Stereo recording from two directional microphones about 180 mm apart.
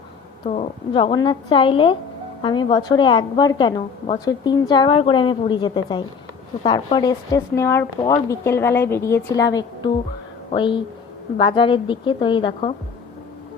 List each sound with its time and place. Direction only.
0.4 s a woman's voice: 35° left (ahead or behind)